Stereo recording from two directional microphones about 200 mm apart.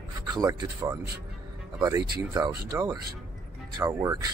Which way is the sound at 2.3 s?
20° right (ahead or behind).